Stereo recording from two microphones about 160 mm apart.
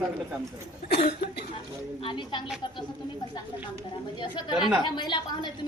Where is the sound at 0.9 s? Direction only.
85° left.